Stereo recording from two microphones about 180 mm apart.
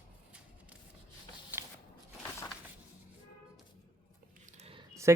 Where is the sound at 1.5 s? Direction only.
10° right (ahead or behind).